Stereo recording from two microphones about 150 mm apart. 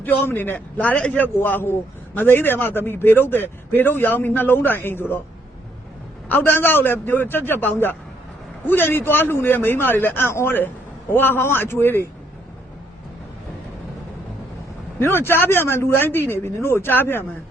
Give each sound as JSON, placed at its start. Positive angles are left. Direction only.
{"t": 0.0, "sound": "a man's voice", "side_deg": 10}
{"t": 6.2, "sound": "a man's voice", "side_deg": 15}
{"t": 14.9, "sound": "a man's voice", "side_deg": 15}